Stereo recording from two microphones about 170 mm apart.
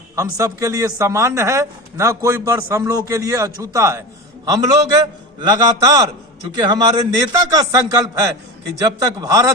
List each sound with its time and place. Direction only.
0.2 s a man's voice: 20° right (ahead or behind)